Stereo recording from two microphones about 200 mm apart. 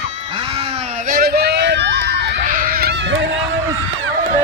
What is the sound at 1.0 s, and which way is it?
Run, 45° right (ahead or behind).